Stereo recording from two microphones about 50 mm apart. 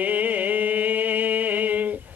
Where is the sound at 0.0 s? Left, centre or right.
Right.